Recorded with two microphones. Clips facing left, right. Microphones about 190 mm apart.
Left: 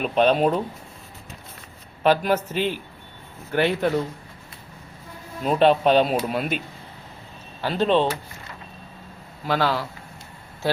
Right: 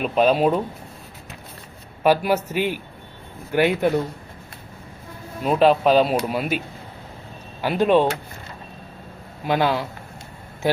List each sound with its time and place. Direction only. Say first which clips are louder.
0.0 s speech: right 1 dB; 5° right (ahead or behind)
2.0 s a man's voice: right 1 dB; 10° right (ahead or behind)
5.4 s speech: right 1 dB; 5° right (ahead or behind)
7.6 s a man's voice: right 3 dB; 10° right (ahead or behind)
9.4 s a man's voice: right 2 dB; 20° right (ahead or behind)